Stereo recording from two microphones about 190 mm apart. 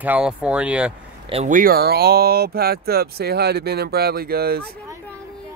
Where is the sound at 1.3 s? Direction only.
40° right (ahead or behind); by 4.6 s 55° right (ahead or behind).